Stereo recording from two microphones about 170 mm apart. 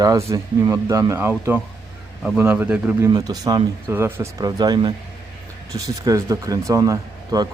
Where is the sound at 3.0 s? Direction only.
20° right (ahead or behind).